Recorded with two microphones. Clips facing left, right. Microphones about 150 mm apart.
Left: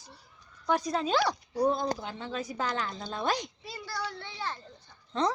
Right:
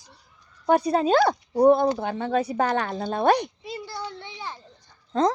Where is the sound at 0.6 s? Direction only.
60° right (ahead or behind).